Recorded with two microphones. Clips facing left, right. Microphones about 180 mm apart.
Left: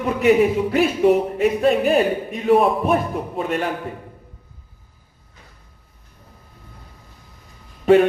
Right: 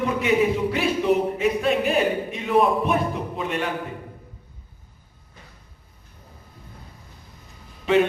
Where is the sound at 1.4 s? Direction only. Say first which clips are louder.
Left 4 dB; 40° left (ahead or behind).